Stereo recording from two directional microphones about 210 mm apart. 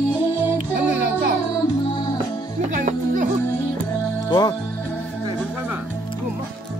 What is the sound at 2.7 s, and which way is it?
Music, 35° right (ahead or behind).